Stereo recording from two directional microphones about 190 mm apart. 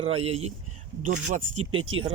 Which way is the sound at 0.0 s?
30° right (ahead or behind).